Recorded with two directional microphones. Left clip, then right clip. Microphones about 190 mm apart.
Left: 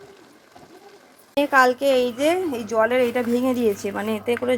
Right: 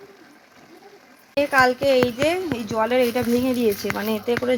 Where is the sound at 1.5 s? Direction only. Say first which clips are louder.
Left 1 dB; 15° left (ahead or behind).